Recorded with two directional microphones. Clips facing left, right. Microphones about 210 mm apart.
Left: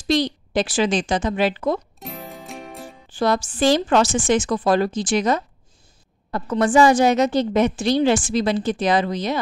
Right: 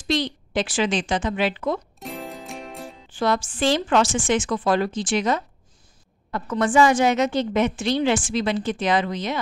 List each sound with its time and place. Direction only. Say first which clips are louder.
0.1 s a woman's voice: left 4 dB; 40° left (ahead or behind)
2.0 s music: right 2 dB; centre (ahead or behind)
3.1 s a woman's voice: left 2 dB; 35° left (ahead or behind)